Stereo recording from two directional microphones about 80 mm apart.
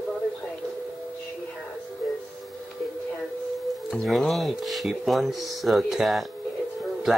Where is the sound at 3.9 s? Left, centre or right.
Centre.